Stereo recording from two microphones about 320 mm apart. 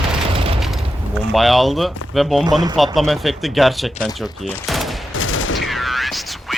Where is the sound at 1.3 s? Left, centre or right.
Centre.